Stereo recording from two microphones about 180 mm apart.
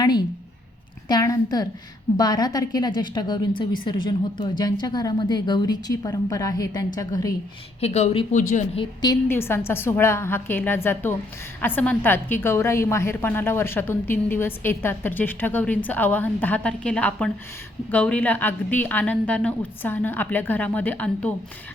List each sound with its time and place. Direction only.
0.0 s a sound: 25° left (ahead or behind)
1.0 s a woman's voice: 20° left (ahead or behind)
7.8 s speech: 35° left (ahead or behind)
8.8 s a woman's voice: 20° left (ahead or behind)